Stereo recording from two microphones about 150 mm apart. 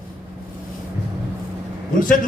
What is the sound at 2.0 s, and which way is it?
Speech, 65° left (ahead or behind).